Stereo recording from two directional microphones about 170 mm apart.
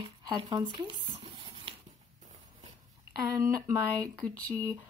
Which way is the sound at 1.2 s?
30° right (ahead or behind).